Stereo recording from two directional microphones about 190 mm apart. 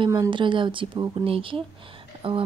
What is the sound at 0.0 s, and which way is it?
Speech, 25° right (ahead or behind).